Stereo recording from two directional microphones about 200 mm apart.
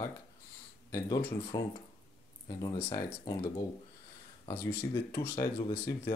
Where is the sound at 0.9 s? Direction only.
20° left (ahead or behind).